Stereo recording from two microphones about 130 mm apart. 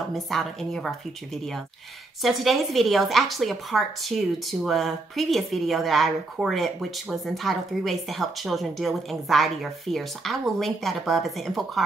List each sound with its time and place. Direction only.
0.1 s a woman's voice: centre (ahead or behind)